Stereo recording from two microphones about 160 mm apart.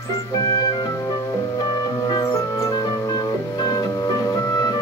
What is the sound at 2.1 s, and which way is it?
Music, 20° left (ahead or behind).